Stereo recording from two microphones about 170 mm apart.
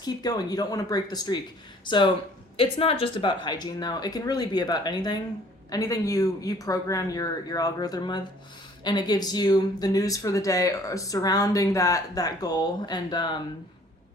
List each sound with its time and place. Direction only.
0.0 s speech: 25° left (ahead or behind)